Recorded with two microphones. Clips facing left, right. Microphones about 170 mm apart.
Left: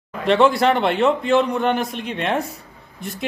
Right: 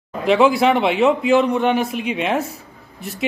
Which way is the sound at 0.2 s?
Centre (ahead or behind).